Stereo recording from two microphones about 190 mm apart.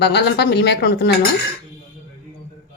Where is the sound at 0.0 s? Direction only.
60° left (ahead or behind).